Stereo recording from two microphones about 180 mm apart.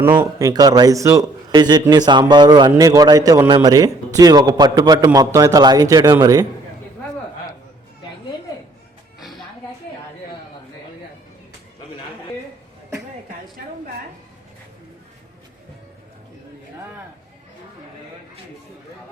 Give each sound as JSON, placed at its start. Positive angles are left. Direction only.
{"t": 0.0, "sound": "a man's voice", "side_deg": -10}